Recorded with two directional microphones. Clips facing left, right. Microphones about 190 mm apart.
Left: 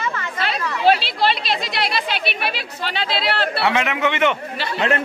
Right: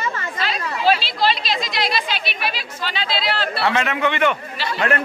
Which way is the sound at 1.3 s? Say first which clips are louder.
Even; 60° left (ahead or behind).